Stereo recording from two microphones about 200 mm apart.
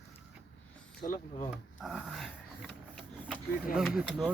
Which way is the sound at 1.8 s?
Centre (ahead or behind).